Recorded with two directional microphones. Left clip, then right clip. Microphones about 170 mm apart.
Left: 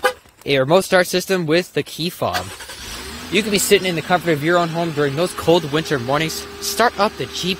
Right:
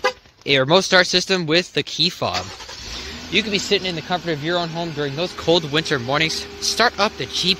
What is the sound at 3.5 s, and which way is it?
Speech, 45° left (ahead or behind).